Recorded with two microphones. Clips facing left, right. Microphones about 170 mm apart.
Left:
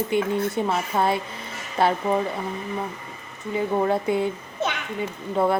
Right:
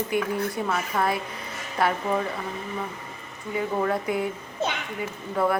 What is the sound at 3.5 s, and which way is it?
A woman's voice, 25° left (ahead or behind).